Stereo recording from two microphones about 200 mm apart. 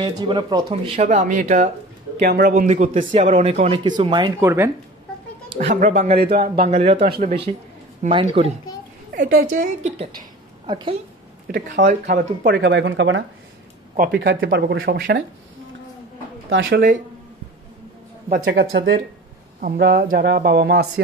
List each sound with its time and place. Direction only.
0.0 s speech: 25° right (ahead or behind)
0.9 s speech: 35° right (ahead or behind)
2.6 s speech: 35° right (ahead or behind); by 4.6 s 15° right (ahead or behind)
5.5 s speech: 35° right (ahead or behind)
6.3 s speech: 50° right (ahead or behind)
6.7 s speech: 30° right (ahead or behind)
7.1 s speech: 45° right (ahead or behind)
8.0 s speech: 25° right (ahead or behind)
9.1 s speech: 45° right (ahead or behind)
10.7 s speech: 25° right (ahead or behind)
11.4 s speech: 40° right (ahead or behind)
12.1 s speech: 65° right (ahead or behind)
16.4 s speech: 70° right (ahead or behind)
18.4 s speech: 55° right (ahead or behind)